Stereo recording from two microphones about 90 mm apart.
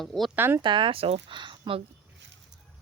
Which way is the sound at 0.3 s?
25° right (ahead or behind).